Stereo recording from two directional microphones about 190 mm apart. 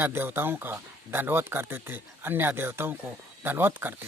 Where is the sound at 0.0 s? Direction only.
10° right (ahead or behind).